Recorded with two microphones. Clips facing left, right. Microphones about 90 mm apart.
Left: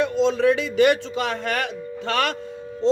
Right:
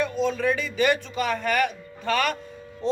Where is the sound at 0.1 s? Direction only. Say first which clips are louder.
Left 5 dB; 80° left.